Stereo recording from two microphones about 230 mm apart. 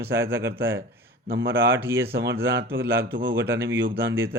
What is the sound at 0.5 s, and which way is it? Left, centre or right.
A man's voice, right.